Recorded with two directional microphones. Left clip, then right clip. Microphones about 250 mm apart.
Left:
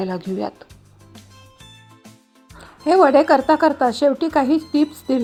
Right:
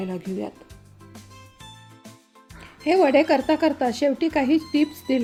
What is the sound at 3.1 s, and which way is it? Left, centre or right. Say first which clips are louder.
A woman's voice: left 5 dB; centre.